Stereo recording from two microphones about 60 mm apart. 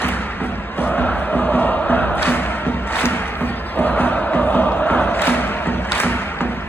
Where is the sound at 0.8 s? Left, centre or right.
Left.